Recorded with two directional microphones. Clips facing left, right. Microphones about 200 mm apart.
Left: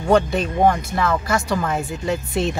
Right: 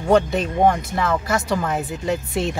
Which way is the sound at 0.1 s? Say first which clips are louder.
Even; 20° right (ahead or behind).